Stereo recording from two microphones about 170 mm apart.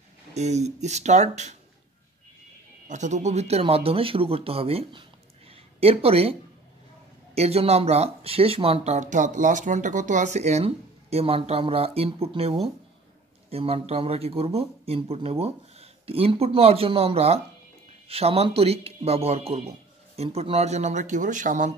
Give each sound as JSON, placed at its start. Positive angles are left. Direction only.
{"t": 0.3, "sound": "speech", "side_deg": -40}
{"t": 2.9, "sound": "speech", "side_deg": -45}
{"t": 7.3, "sound": "speech", "side_deg": -40}